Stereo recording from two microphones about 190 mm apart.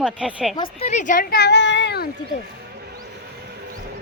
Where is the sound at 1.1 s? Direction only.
50° left (ahead or behind).